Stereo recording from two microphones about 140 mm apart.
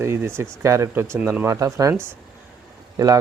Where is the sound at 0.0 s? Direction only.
15° right (ahead or behind).